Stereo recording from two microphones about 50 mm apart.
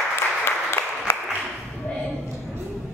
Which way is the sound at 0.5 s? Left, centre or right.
Left.